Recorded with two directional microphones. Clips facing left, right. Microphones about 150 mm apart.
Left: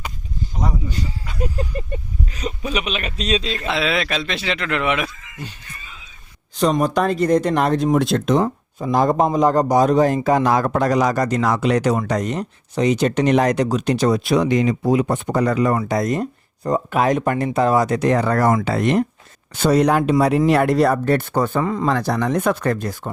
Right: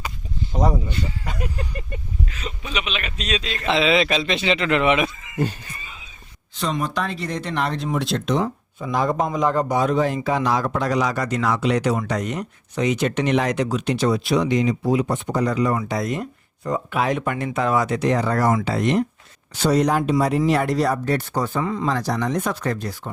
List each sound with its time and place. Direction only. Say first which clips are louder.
0.9 s a man's voice: left 1 dB; 40° left (ahead or behind)
2.7 s a man's voice: left 4 dB; 40° left (ahead or behind)
3.7 s speech: right 4 dB; centre (ahead or behind)
6.6 s speech: left 7 dB; 45° left (ahead or behind)
15.8 s a man's voice: left 5 dB; 45° left (ahead or behind)